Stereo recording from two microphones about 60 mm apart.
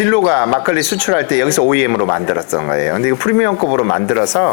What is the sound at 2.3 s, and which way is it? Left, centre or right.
Speech, left.